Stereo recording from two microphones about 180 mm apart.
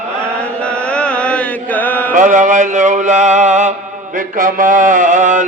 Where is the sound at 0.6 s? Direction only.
5° left (ahead or behind).